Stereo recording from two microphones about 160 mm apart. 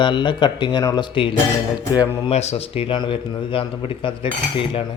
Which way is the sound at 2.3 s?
40° left (ahead or behind).